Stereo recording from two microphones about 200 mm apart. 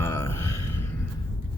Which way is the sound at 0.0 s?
10° left (ahead or behind).